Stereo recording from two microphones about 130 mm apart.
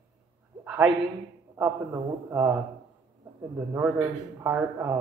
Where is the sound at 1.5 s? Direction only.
20° right (ahead or behind).